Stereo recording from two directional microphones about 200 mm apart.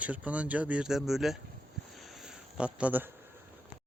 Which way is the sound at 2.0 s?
Centre (ahead or behind).